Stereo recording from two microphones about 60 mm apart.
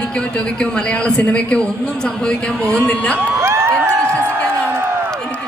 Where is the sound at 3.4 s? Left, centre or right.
Right.